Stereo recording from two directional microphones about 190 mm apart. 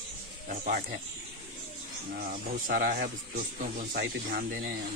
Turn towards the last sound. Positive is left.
turn(degrees=-50)  # may be behind; listen again after turning